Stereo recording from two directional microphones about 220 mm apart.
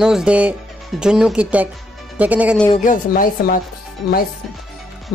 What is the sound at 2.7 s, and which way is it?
Speech, 35° left (ahead or behind).